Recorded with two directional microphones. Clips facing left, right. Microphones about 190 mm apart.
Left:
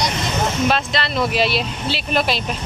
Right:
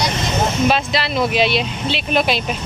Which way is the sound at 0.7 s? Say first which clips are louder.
Right 2 dB; 5° right (ahead or behind).